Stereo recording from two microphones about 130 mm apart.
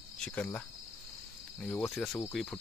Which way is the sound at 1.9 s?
Centre (ahead or behind).